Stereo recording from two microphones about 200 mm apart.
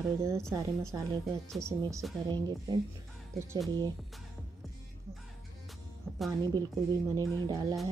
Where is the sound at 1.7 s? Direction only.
15° right (ahead or behind).